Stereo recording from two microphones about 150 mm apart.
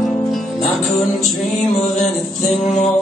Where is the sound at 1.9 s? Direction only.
50° left (ahead or behind).